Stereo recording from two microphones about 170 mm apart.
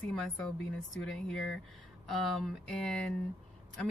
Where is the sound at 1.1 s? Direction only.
Centre (ahead or behind).